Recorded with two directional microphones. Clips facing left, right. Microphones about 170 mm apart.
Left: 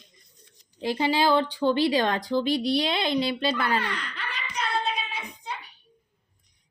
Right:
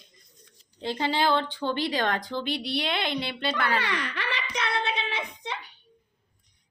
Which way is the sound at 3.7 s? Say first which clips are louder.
Even; 85° right.